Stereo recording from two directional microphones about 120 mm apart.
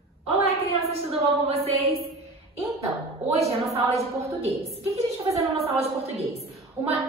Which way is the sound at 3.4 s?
60° right (ahead or behind).